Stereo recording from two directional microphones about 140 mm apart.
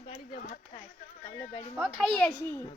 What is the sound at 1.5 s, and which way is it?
Speech, 45° left (ahead or behind).